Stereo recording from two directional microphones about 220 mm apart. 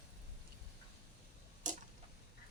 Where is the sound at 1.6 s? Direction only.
35° right (ahead or behind).